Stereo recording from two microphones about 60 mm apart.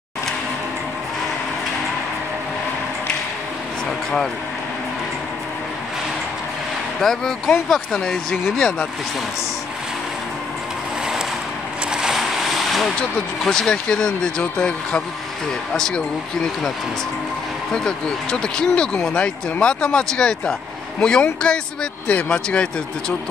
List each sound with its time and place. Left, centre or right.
7.0 s speech: centre
11.9 s vehicle: centre
13.4 s speech: centre
17.7 s speech: centre